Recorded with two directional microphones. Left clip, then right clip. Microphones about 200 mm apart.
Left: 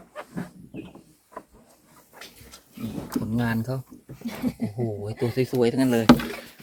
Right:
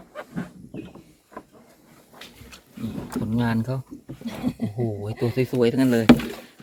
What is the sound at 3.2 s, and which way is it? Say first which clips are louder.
Speech: right 2 dB; centre (ahead or behind).